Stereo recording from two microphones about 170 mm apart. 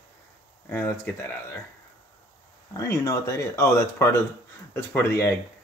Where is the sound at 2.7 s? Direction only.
20° left (ahead or behind).